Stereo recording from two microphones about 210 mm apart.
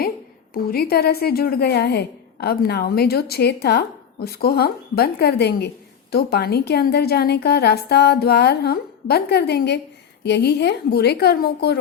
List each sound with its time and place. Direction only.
0.5 s a woman's voice: 45° left (ahead or behind)